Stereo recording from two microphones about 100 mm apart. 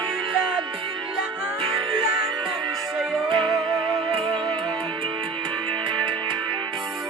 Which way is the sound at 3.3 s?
55° right (ahead or behind).